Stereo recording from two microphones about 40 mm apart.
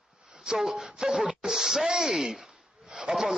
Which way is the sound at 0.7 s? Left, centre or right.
Centre.